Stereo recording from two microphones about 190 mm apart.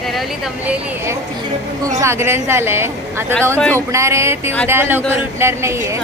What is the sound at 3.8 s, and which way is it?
A woman's voice, 15° right (ahead or behind).